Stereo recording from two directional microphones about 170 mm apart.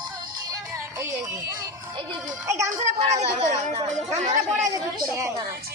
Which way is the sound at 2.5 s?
15° right (ahead or behind).